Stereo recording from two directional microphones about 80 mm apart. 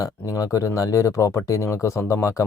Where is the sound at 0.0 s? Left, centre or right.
Left.